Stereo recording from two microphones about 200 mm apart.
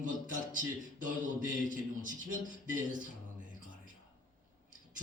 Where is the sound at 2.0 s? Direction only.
40° right (ahead or behind).